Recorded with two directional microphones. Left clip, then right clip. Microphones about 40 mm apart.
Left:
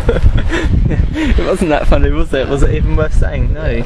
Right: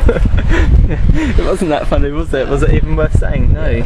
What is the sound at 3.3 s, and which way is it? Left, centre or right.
Speech, centre.